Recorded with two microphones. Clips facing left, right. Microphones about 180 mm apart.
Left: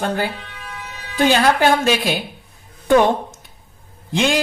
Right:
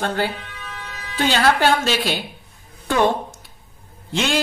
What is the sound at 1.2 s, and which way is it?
Speech, 15° left (ahead or behind).